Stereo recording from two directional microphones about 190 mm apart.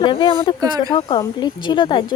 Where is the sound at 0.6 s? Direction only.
20° right (ahead or behind).